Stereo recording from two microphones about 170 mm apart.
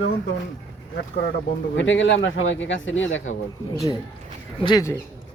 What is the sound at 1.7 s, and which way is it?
Speech, 90° left.